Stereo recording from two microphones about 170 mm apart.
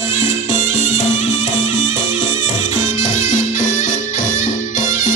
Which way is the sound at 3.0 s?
45° left (ahead or behind).